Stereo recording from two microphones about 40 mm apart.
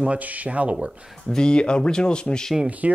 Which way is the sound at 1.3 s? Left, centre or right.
Left.